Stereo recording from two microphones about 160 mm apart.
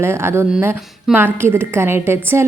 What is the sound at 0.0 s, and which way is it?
A woman's voice, 15° right (ahead or behind).